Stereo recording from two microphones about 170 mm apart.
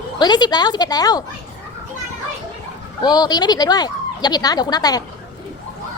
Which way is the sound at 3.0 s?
25° left (ahead or behind).